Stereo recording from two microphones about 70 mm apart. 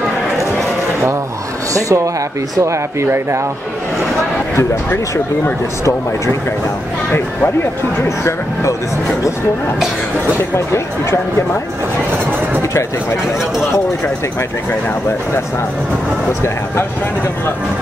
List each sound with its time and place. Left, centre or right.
1.7 s speech: right
2.6 s speech: right
4.6 s speech: left
8.0 s speech: left